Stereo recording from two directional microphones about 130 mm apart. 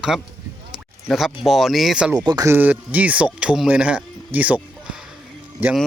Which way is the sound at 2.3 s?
30° right (ahead or behind).